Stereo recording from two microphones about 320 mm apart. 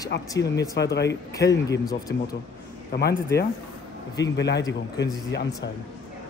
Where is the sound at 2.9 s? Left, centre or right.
Left.